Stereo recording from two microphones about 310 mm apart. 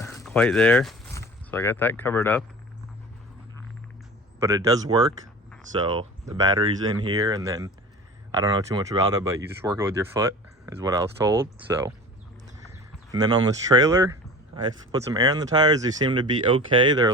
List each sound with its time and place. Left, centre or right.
0.0 s speech: centre
4.4 s speech: centre
13.1 s speech: centre